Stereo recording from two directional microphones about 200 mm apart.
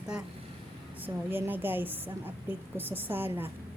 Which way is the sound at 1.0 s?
10° right (ahead or behind).